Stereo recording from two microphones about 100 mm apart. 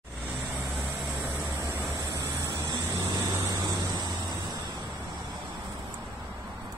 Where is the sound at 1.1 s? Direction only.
20° right (ahead or behind).